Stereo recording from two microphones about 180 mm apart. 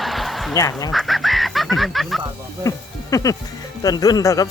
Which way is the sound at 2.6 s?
20° left (ahead or behind).